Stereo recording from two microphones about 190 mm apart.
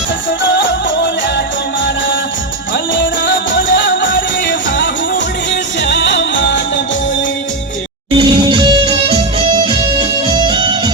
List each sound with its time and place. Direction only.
0.5 s music: 75° left (ahead or behind)
2.9 s music: 75° left (ahead or behind)
8.1 s music: 25° right (ahead or behind)